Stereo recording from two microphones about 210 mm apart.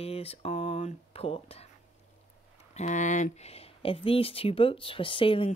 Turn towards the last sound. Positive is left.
turn(degrees=25)  # may be behind; listen again after turning